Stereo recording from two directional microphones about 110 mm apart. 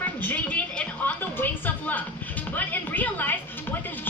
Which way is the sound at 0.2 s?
15° left (ahead or behind).